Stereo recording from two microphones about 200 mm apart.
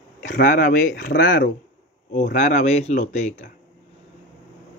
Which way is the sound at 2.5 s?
35° left (ahead or behind).